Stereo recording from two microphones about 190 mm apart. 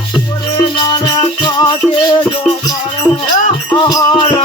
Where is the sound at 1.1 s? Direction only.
20° left (ahead or behind).